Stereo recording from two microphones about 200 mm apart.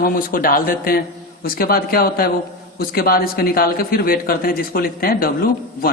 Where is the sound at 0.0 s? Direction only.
45° left (ahead or behind).